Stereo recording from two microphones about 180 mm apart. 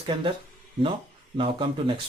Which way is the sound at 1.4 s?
30° right (ahead or behind).